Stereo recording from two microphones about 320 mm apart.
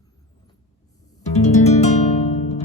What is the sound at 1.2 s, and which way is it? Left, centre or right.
Music, left.